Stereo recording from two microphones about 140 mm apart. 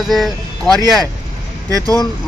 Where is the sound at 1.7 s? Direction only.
25° right (ahead or behind).